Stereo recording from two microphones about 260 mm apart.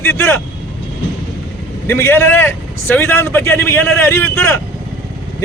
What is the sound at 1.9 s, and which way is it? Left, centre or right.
A man's voice, centre.